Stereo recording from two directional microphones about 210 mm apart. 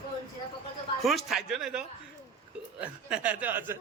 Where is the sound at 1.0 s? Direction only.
Centre (ahead or behind).